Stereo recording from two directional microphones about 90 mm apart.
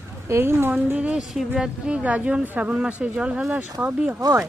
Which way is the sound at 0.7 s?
15° right (ahead or behind).